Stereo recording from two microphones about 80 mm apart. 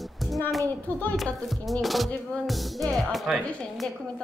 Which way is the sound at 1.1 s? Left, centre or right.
Centre.